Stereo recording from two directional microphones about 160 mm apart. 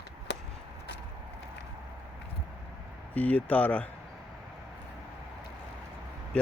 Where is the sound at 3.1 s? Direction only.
10° left (ahead or behind).